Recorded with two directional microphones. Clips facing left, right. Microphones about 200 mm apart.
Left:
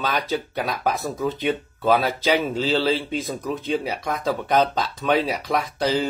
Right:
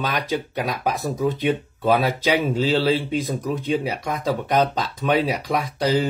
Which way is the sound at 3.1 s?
15° right (ahead or behind).